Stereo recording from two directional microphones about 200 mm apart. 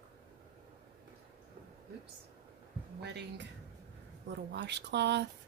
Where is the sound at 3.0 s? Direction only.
60° right (ahead or behind).